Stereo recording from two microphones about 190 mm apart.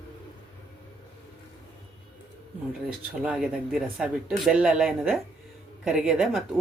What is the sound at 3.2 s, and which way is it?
Speech, 5° right (ahead or behind).